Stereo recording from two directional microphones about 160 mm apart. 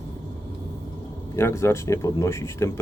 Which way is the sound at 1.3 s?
15° left (ahead or behind).